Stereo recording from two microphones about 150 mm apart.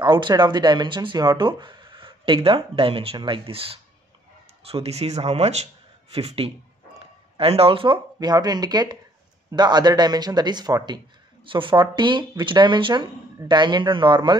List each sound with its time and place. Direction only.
0.0 s speech: 30° right (ahead or behind)